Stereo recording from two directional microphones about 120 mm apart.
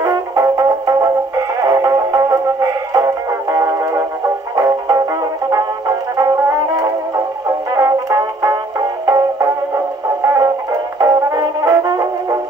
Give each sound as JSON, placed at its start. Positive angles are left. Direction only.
{"t": 0.0, "sound": "music", "side_deg": -30}